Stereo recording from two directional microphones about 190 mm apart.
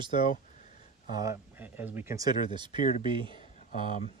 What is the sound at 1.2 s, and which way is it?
Speech, 15° right (ahead or behind).